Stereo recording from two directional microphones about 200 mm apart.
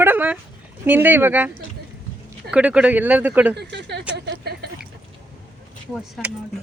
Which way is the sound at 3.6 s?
60° right (ahead or behind).